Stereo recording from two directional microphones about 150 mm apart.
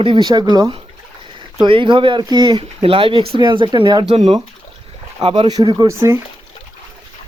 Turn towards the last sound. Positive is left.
turn(degrees=-20)  # may be behind; listen again after turning